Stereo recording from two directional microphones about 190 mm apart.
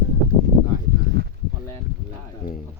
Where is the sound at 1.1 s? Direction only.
60° right (ahead or behind).